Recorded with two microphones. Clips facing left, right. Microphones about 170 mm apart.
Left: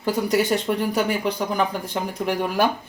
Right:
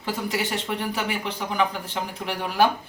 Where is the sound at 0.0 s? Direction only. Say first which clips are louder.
Left 7 dB; 45° left (ahead or behind).